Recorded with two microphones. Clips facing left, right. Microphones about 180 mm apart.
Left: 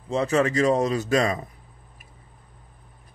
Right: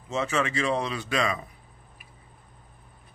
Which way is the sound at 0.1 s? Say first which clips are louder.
Left 6 dB; 35° left (ahead or behind).